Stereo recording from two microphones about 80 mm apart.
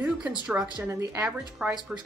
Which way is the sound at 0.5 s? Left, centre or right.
Right.